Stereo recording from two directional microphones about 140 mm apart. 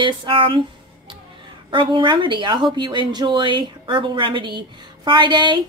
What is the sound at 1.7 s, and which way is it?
Speech, 35° right (ahead or behind).